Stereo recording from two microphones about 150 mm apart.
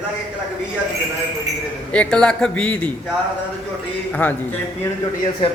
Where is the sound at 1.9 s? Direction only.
5° left (ahead or behind).